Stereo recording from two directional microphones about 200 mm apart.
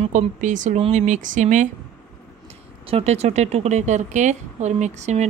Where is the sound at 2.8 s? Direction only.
30° right (ahead or behind).